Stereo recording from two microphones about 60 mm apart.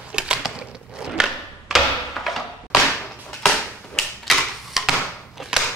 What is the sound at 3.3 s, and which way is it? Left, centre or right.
Typewriter, centre.